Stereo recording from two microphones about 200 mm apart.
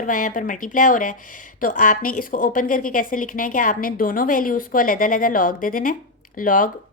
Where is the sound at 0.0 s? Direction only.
40° left (ahead or behind).